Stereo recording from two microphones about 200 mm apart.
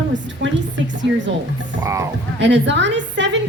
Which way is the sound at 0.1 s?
65° right (ahead or behind).